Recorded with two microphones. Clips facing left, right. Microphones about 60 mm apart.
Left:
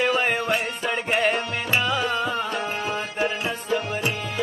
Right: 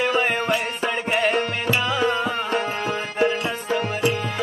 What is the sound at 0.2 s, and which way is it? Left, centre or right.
Music, centre.